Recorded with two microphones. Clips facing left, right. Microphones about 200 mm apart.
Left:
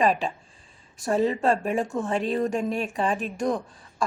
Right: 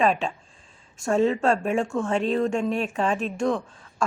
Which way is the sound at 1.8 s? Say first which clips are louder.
Right 2 dB; 20° left (ahead or behind).